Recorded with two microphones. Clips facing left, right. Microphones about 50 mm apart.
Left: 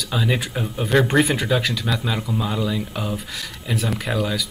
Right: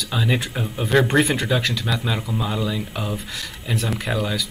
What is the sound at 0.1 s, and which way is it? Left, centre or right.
Speech, centre.